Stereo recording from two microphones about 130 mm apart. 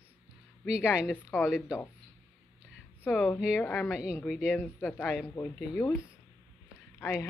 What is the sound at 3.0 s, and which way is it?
Speech, 15° left (ahead or behind).